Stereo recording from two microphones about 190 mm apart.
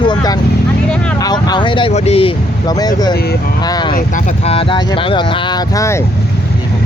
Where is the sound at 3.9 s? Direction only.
40° left (ahead or behind).